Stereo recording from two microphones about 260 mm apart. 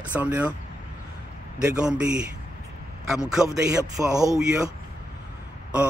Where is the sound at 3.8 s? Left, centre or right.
Centre.